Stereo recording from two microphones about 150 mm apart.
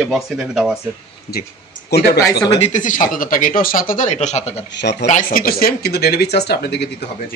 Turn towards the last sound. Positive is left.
turn(degrees=90)